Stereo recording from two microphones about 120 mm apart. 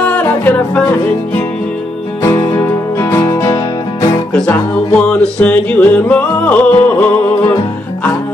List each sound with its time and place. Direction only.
0.0 s music: 10° left (ahead or behind); by 4.2 s 30° left (ahead or behind)
5.0 s music: 10° left (ahead or behind)